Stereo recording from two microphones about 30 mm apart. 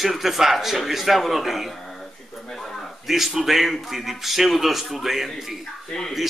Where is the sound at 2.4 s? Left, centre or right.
Centre.